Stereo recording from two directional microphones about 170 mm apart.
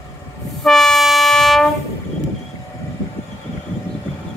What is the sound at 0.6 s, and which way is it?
Train, centre (ahead or behind).